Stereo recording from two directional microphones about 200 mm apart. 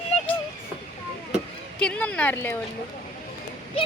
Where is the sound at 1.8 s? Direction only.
5° left (ahead or behind).